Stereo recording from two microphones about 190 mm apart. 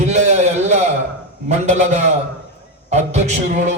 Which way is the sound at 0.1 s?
35° right (ahead or behind).